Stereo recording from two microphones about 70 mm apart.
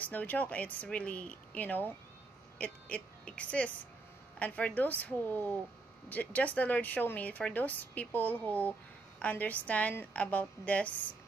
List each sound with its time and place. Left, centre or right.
0.0 s speech: left